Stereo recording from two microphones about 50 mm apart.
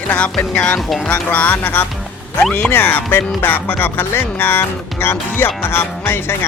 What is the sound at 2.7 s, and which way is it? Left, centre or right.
Speech, left.